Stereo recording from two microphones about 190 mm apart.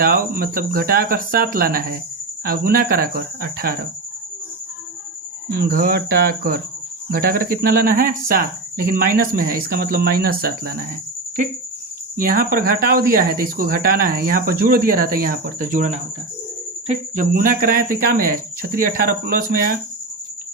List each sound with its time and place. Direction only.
0.0 s speech: 50° right (ahead or behind)
5.5 s speech: 50° right (ahead or behind)
12.1 s speech: 50° right (ahead or behind)